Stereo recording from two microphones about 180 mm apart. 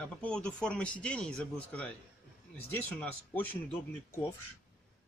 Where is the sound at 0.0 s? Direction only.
5° left (ahead or behind).